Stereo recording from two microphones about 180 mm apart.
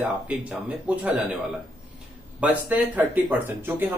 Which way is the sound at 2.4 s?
10° right (ahead or behind).